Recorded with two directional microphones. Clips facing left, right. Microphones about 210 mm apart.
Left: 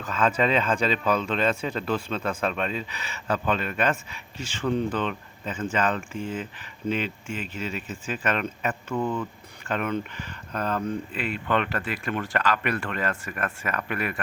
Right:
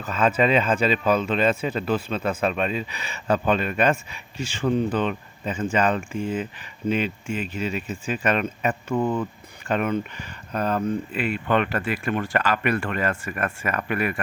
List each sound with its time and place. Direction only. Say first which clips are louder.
0.0 s speech: right 3 dB; 10° right (ahead or behind)
8.9 s speech: right 4 dB; 25° right (ahead or behind); by 14.2 s 5° right (ahead or behind)